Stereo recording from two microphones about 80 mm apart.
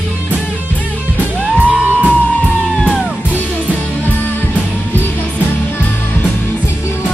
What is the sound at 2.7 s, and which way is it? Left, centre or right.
Music, centre.